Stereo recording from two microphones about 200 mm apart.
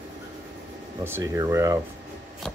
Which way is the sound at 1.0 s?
15° right (ahead or behind).